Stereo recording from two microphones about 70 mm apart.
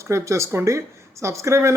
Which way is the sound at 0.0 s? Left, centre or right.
Right.